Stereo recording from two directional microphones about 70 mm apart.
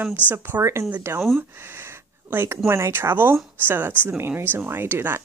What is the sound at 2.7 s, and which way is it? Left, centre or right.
Speech, right.